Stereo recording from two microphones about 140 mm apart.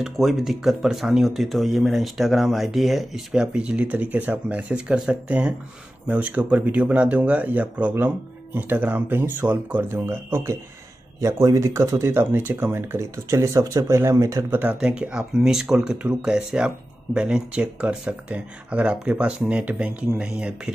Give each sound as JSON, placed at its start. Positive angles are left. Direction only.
{"t": 0.0, "sound": "speech", "side_deg": 0}
{"t": 14.6, "sound": "speech", "side_deg": -10}